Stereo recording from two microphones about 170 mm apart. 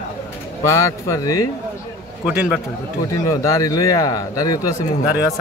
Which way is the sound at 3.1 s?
20° left (ahead or behind).